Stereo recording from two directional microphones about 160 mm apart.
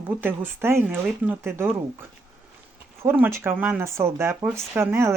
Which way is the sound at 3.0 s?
15° right (ahead or behind).